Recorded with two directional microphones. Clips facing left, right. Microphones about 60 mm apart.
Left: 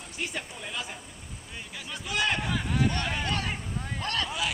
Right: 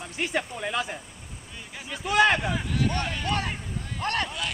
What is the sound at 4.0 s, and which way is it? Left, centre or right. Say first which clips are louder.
Speech: right 4 dB; right.